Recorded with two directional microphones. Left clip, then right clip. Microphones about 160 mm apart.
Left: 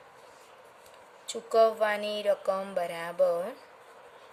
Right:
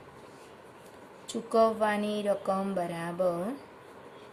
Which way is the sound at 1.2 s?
40° left (ahead or behind).